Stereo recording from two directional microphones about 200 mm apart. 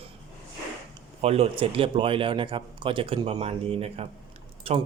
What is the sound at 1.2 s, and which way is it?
Speech, 30° right (ahead or behind).